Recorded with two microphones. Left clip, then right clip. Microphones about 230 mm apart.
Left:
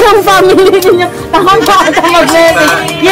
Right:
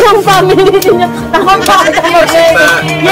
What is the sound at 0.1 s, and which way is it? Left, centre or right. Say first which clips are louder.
Speech: left 1 dB; left.